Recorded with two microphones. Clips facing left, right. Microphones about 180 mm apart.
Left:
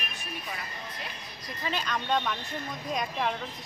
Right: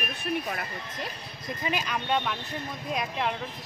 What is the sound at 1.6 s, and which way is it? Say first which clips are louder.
Speech: right 1 dB; 10° right (ahead or behind).